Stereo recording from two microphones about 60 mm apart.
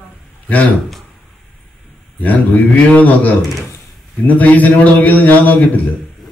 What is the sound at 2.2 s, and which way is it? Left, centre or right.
Speech, left.